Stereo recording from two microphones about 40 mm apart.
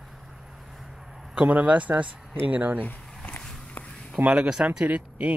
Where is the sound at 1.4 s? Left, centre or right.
Right.